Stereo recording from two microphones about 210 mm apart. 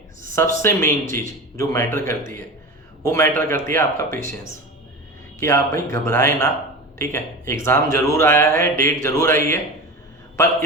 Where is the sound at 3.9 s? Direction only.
40° right (ahead or behind).